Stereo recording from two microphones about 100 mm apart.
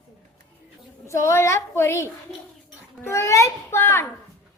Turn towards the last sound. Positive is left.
turn(degrees=25)  # may be behind; listen again after turning